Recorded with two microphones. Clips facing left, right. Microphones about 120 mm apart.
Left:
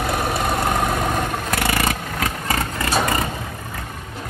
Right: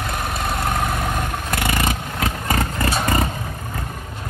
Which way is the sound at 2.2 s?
20° right (ahead or behind).